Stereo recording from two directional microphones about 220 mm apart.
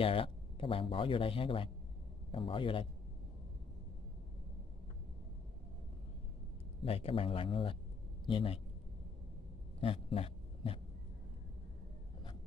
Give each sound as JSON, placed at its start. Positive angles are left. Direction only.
{"t": 0.0, "sound": "speech", "side_deg": 25}
{"t": 6.8, "sound": "speech", "side_deg": 25}
{"t": 9.8, "sound": "a sound", "side_deg": 25}